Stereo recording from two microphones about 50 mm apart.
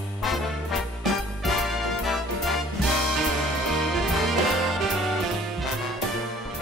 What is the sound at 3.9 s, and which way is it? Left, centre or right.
Music, centre.